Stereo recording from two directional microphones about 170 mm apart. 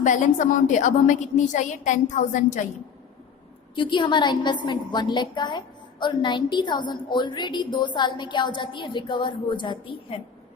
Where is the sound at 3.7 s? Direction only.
30° left (ahead or behind).